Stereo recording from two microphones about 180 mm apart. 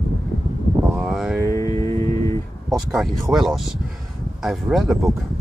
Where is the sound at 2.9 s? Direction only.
Centre (ahead or behind).